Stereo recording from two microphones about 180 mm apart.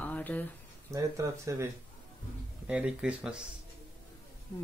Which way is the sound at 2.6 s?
5° right (ahead or behind).